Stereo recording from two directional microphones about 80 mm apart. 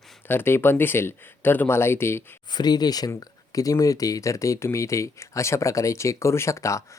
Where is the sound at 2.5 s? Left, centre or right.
Left.